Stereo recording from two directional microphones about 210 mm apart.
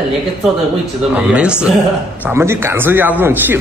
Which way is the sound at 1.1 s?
5° right (ahead or behind).